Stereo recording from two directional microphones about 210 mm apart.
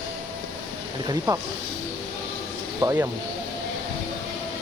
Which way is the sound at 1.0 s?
20° right (ahead or behind).